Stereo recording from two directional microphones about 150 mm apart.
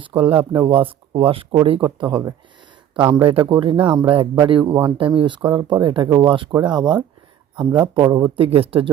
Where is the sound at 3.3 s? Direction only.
35° right (ahead or behind).